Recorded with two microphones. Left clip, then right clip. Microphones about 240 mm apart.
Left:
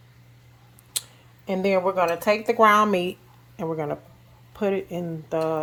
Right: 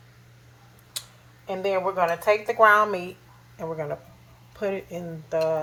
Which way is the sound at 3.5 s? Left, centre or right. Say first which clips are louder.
Left 3 dB; left.